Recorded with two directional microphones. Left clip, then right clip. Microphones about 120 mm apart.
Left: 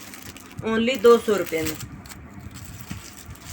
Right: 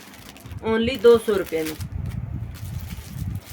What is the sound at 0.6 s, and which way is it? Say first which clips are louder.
Speech: right 1 dB; 40° right (ahead or behind).